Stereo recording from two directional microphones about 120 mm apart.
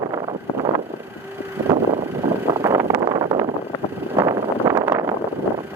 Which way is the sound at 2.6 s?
25° right (ahead or behind).